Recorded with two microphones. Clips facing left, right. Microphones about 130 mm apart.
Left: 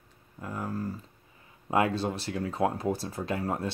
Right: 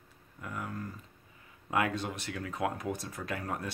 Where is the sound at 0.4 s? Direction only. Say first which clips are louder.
Left 5 dB; 30° left (ahead or behind).